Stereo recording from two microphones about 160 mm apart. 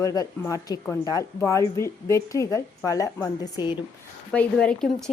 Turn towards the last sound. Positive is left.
turn(degrees=5)  # may be behind; listen again after turning